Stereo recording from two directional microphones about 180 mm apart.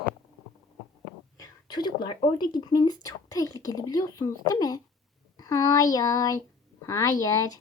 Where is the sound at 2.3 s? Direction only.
25° left (ahead or behind).